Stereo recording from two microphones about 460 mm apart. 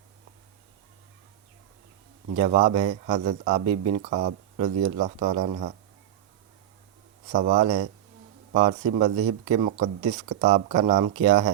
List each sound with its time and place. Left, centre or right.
2.3 s a man's voice: centre
7.3 s a man's voice: centre
9.0 s a man's voice: centre